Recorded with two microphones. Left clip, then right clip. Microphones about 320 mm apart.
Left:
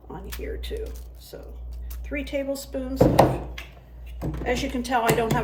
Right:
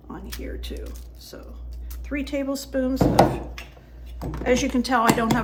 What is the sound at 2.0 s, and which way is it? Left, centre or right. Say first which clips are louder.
Speech: right 1 dB; centre.